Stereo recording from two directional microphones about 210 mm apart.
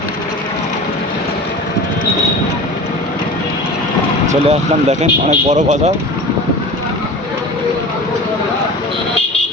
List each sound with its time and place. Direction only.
4.3 s speech: 35° right (ahead or behind)